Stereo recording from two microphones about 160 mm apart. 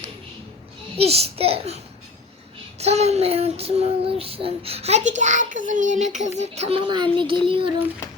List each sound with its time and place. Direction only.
0.9 s child singing: 40° right (ahead or behind)